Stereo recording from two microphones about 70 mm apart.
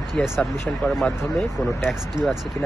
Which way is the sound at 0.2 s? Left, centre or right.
Centre.